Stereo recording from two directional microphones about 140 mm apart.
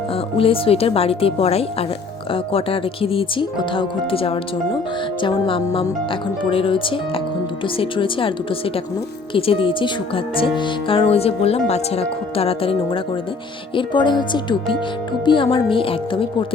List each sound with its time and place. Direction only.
0.3 s speech: 40° left (ahead or behind)
9.3 s speech: 40° left (ahead or behind)